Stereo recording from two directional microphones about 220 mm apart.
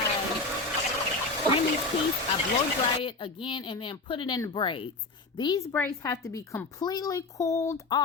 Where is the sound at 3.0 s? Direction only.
20° left (ahead or behind).